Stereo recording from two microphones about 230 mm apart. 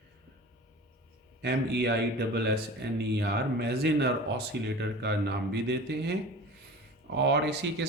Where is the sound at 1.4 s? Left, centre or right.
Right.